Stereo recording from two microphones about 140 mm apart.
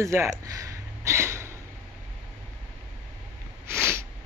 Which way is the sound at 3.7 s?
20° right (ahead or behind).